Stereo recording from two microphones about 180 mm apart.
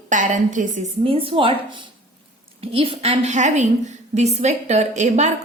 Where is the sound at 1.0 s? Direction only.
30° right (ahead or behind).